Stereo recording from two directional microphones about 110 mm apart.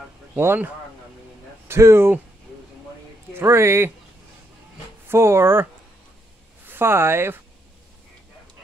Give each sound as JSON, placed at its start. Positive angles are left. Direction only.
{"t": 0.4, "sound": "speech", "side_deg": -20}
{"t": 1.7, "sound": "speech", "side_deg": -25}
{"t": 3.3, "sound": "speech", "side_deg": -25}
{"t": 5.0, "sound": "speech", "side_deg": -25}
{"t": 6.7, "sound": "speech", "side_deg": -20}